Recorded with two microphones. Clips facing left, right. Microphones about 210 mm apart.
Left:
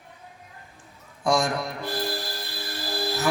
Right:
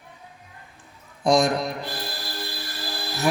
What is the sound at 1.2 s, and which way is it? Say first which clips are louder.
Speech: right 4 dB; 20° right (ahead or behind).